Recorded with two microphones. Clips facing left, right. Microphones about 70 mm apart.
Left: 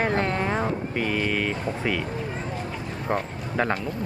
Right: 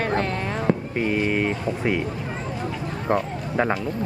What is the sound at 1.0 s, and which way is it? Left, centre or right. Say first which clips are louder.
Speech: even; centre.